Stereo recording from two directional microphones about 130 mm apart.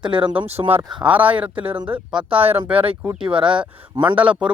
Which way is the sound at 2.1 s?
40° right (ahead or behind).